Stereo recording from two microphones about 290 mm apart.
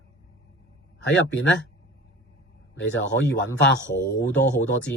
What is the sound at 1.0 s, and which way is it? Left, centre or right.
Speech, left.